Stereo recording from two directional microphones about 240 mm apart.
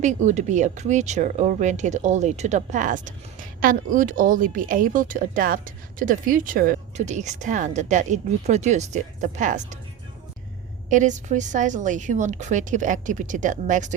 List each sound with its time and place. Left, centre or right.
0.0 s speech: right
10.8 s speech: right